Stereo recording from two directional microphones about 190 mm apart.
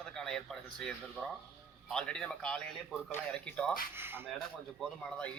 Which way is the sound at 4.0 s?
10° right (ahead or behind).